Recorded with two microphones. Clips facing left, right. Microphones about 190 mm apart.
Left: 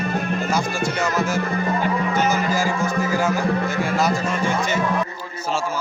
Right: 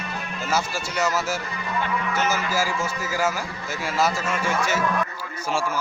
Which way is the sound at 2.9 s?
55° left (ahead or behind).